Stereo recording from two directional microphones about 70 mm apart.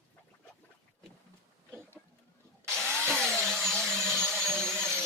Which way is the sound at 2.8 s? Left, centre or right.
Centre.